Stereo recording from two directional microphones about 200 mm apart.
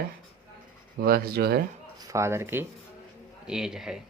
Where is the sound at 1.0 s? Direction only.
50° right (ahead or behind).